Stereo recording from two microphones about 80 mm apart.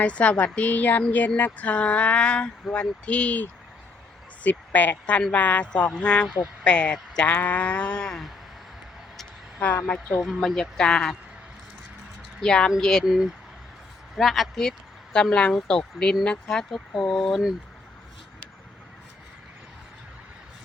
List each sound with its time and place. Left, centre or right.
0.0 s speech: centre
6.2 s speech: centre
6.7 s speech: centre
9.8 s speech: centre
10.2 s speech: centre
12.4 s speech: centre
13.1 s speech: centre